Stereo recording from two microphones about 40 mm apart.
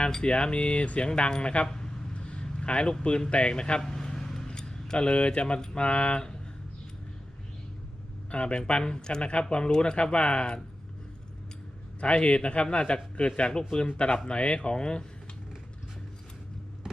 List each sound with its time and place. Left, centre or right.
0.0 s speech: left
2.1 s vehicle: left
3.0 s speech: left
3.8 s a sound: centre
5.8 s speech: left
8.3 s speech: left
11.9 s speech: left